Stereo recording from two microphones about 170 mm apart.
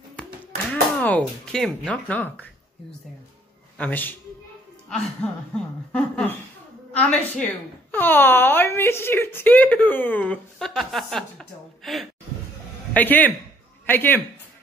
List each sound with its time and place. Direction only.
0.1 s speech: 5° left (ahead or behind)
3.7 s speech: 10° left (ahead or behind)